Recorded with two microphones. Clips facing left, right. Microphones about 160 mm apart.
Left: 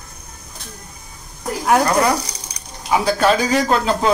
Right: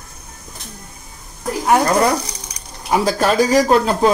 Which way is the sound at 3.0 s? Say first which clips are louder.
Right 1 dB; 40° right (ahead or behind).